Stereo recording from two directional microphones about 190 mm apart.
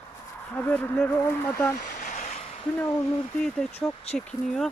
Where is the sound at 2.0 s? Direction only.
40° left (ahead or behind).